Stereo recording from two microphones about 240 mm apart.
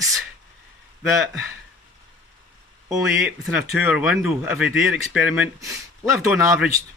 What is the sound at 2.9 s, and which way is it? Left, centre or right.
Speech, centre.